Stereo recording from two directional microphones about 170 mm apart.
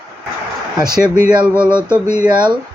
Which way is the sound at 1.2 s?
5° right (ahead or behind).